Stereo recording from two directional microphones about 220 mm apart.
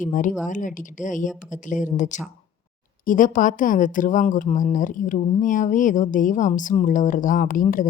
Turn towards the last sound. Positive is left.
turn(degrees=40)  # may be behind; listen again after turning